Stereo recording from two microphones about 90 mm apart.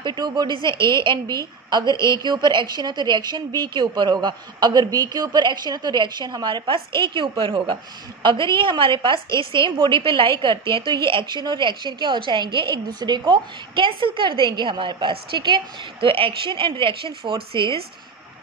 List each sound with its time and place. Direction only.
0.0 s a woman's voice: 55° right (ahead or behind); by 17.8 s 80° right